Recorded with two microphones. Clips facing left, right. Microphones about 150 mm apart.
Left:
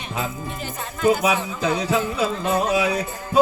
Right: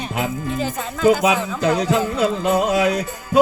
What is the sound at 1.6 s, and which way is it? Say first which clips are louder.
Music: right 5 dB; 65° right (ahead or behind).